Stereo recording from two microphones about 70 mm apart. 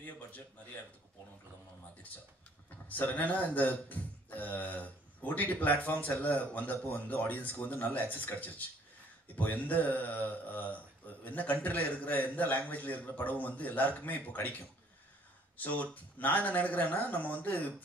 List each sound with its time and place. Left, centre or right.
3.0 s speech: left
15.5 s speech: left